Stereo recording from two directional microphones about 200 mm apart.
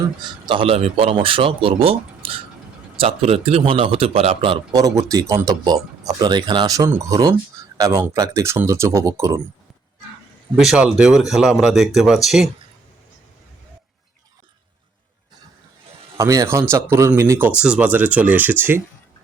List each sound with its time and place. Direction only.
0.2 s speech: 25° right (ahead or behind)
10.6 s speech: centre (ahead or behind)
16.1 s speech: 15° right (ahead or behind)